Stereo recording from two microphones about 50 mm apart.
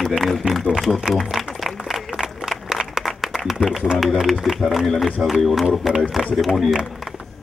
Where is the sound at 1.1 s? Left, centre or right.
Centre.